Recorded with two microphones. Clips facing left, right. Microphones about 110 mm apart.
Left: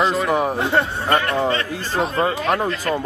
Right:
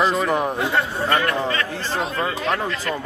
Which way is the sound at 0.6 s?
30° left (ahead or behind).